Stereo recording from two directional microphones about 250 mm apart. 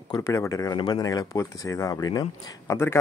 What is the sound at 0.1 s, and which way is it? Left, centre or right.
A man's voice, centre.